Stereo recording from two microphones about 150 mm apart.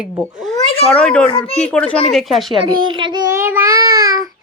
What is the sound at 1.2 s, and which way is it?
Speech, 40° left (ahead or behind).